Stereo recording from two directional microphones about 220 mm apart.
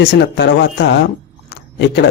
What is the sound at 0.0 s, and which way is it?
Speech, 50° left (ahead or behind).